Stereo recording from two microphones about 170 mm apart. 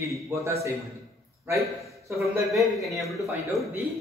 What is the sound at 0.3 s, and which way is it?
Speech, 15° right (ahead or behind).